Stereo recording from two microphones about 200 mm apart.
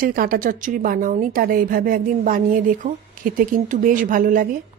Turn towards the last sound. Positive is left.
turn(degrees=-45)  # may be behind; listen again after turning